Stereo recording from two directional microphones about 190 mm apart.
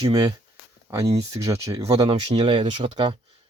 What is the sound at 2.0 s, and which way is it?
Speech, 30° right (ahead or behind).